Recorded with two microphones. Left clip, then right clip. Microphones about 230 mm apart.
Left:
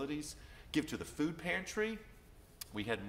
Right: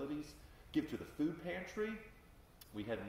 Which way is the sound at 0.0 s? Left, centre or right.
Left.